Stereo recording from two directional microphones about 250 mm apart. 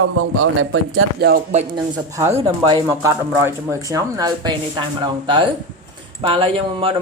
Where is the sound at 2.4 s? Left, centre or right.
Centre.